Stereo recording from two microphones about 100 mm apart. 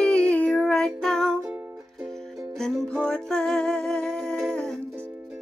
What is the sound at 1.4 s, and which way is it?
Music, 5° right (ahead or behind).